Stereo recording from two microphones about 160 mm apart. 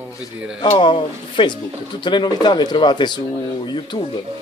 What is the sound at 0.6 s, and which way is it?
Speech, 30° left (ahead or behind).